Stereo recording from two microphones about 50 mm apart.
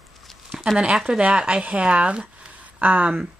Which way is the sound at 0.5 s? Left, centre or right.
Centre.